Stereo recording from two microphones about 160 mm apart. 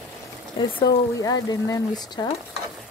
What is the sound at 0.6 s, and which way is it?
Speech, 30° left (ahead or behind).